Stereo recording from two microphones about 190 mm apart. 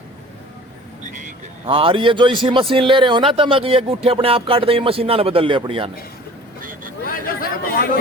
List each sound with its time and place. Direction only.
1.0 s vehicle: 40° right (ahead or behind)
1.6 s a man's voice: 30° right (ahead or behind)
6.6 s vehicle: 45° right (ahead or behind)
7.0 s chatter: 50° left (ahead or behind)